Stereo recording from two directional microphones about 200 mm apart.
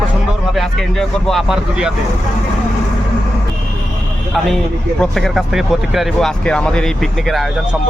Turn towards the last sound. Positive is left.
turn(degrees=5)  # may be behind; listen again after turning